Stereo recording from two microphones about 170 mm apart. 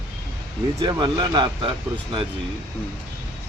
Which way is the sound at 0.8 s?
25° right (ahead or behind).